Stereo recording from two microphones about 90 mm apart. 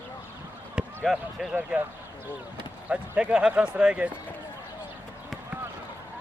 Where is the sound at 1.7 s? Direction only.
15° right (ahead or behind).